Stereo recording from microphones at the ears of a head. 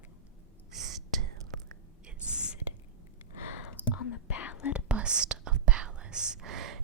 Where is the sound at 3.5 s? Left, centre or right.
Left.